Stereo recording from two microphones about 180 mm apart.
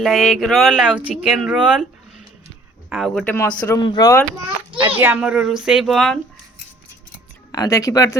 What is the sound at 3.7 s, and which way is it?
Speech, 25° left (ahead or behind).